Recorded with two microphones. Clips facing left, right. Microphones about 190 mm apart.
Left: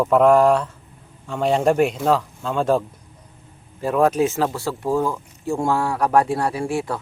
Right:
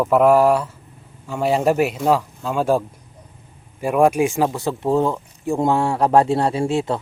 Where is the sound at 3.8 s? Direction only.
15° right (ahead or behind).